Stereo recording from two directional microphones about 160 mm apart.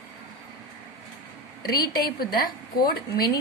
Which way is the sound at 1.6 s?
65° left (ahead or behind).